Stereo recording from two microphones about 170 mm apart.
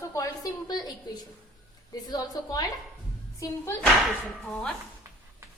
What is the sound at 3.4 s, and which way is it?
Speech, 20° left (ahead or behind).